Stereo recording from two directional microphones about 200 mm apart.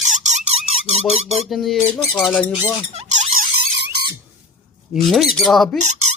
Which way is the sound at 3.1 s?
35° right (ahead or behind).